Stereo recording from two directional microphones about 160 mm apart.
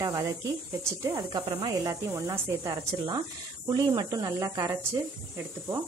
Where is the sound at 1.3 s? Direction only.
25° right (ahead or behind).